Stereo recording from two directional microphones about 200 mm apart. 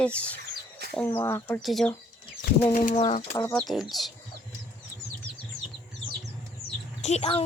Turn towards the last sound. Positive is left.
turn(degrees=30)  # may be behind; listen again after turning